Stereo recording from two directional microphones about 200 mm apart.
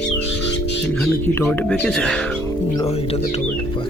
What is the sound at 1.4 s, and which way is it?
Speech, 5° left (ahead or behind).